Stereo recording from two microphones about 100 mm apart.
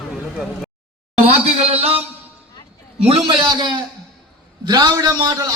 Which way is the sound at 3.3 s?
50° right (ahead or behind).